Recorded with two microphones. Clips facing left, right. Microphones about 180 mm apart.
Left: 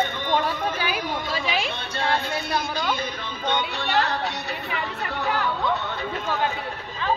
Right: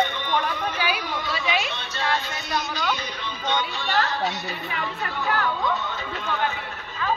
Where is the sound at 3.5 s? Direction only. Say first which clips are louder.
Left 1 dB; 60° left (ahead or behind).